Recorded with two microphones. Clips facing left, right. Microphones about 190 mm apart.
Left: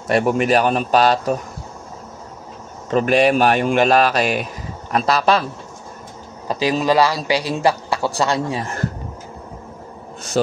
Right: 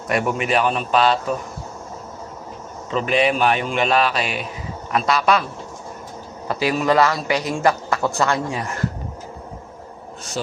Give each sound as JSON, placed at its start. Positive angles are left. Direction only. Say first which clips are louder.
{"t": 0.1, "sound": "a man's voice", "louder": "left 4 dB", "side_deg": 40}
{"t": 2.9, "sound": "a man's voice", "louder": "left 4 dB", "side_deg": 45}
{"t": 6.4, "sound": "a man's voice", "louder": "left 2 dB", "side_deg": 20}
{"t": 8.5, "sound": "a man's voice", "louder": "left 2 dB", "side_deg": 30}
{"t": 10.4, "sound": "a man's voice", "louder": "left 9 dB", "side_deg": 45}